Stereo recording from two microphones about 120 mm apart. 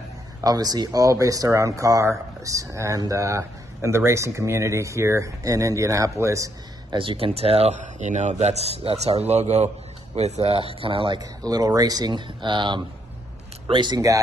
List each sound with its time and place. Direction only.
0.4 s speech: 30° right (ahead or behind)
6.9 s speech: 50° right (ahead or behind)
11.1 s speech: 30° right (ahead or behind)